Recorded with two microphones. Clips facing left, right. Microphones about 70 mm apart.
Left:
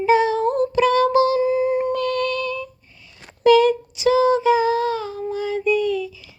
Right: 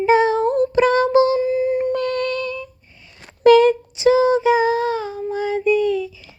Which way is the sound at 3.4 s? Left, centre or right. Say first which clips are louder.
Right 3 dB; right.